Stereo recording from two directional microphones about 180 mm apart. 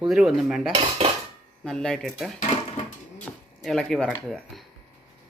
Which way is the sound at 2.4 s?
40° left (ahead or behind).